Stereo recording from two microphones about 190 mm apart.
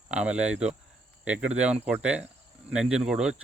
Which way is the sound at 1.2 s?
5° right (ahead or behind).